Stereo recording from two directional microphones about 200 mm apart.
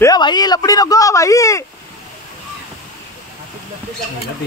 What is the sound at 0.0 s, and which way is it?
Speech, 20° left (ahead or behind).